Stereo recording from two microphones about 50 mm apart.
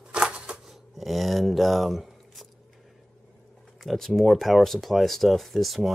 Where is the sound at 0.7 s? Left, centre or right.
Centre.